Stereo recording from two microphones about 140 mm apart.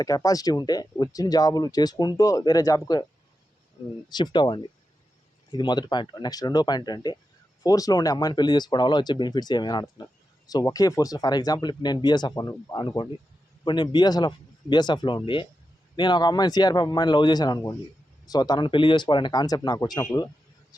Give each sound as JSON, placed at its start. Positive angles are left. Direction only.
{"t": 0.0, "sound": "speech", "side_deg": 25}
{"t": 4.1, "sound": "speech", "side_deg": 30}